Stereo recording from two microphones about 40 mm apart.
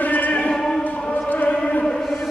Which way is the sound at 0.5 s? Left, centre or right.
Centre.